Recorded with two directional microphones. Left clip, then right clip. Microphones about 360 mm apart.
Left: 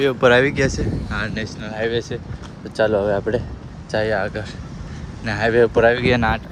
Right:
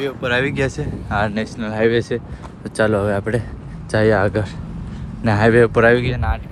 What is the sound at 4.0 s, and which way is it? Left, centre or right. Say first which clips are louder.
Speech: right 5 dB; centre.